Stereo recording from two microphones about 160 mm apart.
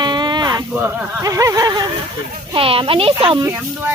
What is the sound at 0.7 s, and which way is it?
Speech, 10° right (ahead or behind).